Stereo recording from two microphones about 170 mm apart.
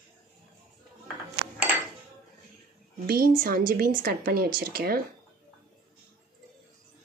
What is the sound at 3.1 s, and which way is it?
A woman's voice, 60° right (ahead or behind).